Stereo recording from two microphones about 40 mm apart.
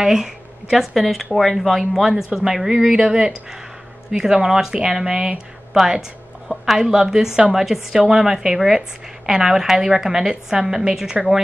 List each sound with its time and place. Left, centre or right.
0.0 s speech: centre
0.9 s speech: centre
2.0 s a woman's voice: centre
2.9 s a woman's voice: centre
5.7 s a woman's voice: centre